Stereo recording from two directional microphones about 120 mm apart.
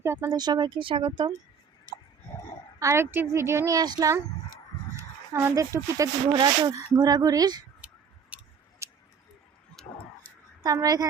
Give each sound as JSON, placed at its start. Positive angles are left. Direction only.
{"t": 0.0, "sound": "speech", "side_deg": -25}
{"t": 2.7, "sound": "a woman's voice", "side_deg": -25}
{"t": 4.9, "sound": "speech", "side_deg": -20}
{"t": 8.3, "sound": "tick-tock", "side_deg": -10}
{"t": 8.8, "sound": "a sound", "side_deg": -25}
{"t": 9.8, "sound": "tick-tock", "side_deg": 5}
{"t": 10.3, "sound": "a sound", "side_deg": 15}
{"t": 10.6, "sound": "speech", "side_deg": -30}